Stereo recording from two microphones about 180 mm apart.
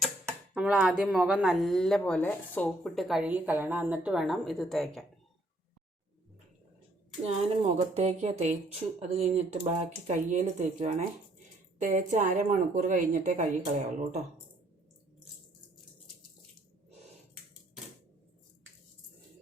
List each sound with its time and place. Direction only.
0.0 s speech: centre (ahead or behind)
7.3 s a woman's voice: 35° right (ahead or behind)